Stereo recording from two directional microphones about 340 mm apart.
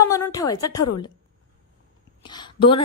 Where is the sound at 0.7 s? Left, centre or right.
Left.